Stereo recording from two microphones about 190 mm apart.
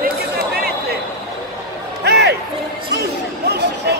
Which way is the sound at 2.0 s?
60° right (ahead or behind).